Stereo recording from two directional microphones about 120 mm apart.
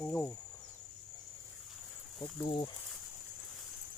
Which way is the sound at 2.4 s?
35° left (ahead or behind).